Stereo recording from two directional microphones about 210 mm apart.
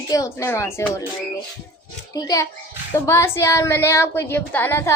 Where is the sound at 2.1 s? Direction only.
15° left (ahead or behind).